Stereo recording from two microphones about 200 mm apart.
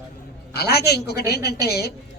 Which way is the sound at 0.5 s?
55° left (ahead or behind).